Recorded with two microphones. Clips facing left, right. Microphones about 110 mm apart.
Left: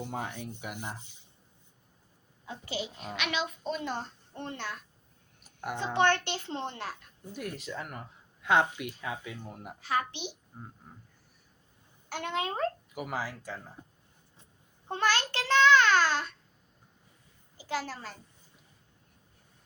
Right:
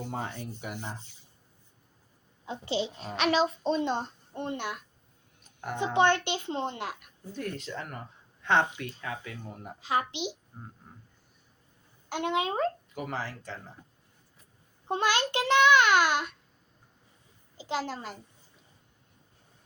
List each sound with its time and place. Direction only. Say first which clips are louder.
0.7 s speech: right 2 dB; 15° left (ahead or behind)
2.5 s a child's voice: right 6 dB; 25° right (ahead or behind)
5.4 s a sound: left 1 dB; 10° left (ahead or behind)
5.7 s a child's voice: right 2 dB; 15° right (ahead or behind)
7.3 s speech: right 2 dB; 10° left (ahead or behind)
9.8 s a child's voice: right 2 dB; 20° right (ahead or behind)
12.0 s a child's voice: right 4 dB; 20° right (ahead or behind)
12.9 s speech: even; 5° left (ahead or behind)
13.8 s speech: left 3 dB; 20° left (ahead or behind)
14.8 s a child's voice: right 2 dB; 20° right (ahead or behind)
17.6 s a child's voice: right 2 dB; 20° right (ahead or behind)